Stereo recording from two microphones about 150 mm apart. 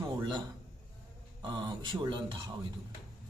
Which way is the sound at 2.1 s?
30° right (ahead or behind).